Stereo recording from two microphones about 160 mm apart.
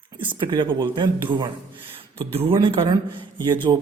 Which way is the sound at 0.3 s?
30° right (ahead or behind).